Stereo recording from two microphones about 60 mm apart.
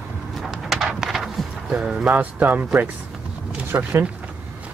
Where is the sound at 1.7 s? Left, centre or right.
Centre.